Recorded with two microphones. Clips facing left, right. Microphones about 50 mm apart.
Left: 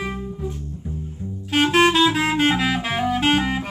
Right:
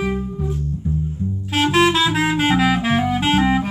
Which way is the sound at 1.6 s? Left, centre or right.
Centre.